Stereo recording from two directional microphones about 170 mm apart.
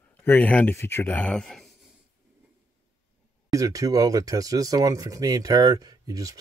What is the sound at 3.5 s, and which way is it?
Speech, 20° right (ahead or behind).